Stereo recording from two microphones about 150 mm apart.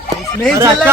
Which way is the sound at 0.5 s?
20° right (ahead or behind).